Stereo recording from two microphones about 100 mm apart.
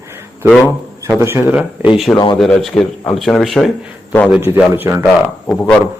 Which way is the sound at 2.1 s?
45° left (ahead or behind).